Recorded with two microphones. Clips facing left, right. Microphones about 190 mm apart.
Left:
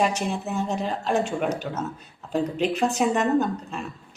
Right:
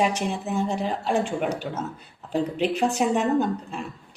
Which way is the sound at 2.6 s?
10° right (ahead or behind).